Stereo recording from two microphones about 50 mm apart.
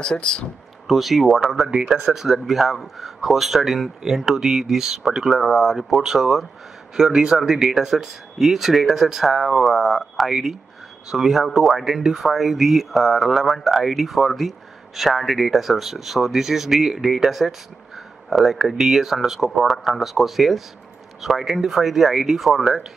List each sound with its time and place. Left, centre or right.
0.0 s speech: centre
0.8 s speech: centre